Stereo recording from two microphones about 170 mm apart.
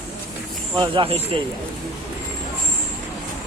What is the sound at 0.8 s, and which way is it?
Speech, 30° right (ahead or behind).